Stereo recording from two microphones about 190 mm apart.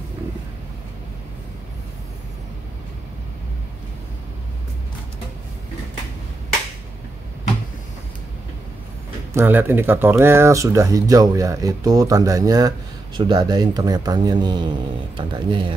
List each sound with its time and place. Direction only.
9.3 s speech: 10° right (ahead or behind)